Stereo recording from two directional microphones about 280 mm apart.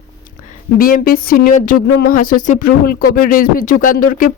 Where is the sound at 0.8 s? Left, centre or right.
Left.